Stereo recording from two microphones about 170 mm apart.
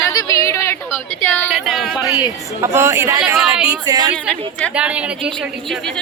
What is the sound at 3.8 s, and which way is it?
Speech, 25° right (ahead or behind).